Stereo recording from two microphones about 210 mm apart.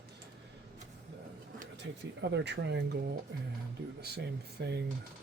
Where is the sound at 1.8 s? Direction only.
55° right (ahead or behind).